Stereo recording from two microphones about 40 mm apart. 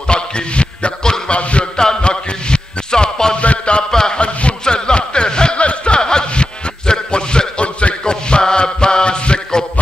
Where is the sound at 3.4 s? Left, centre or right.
Left.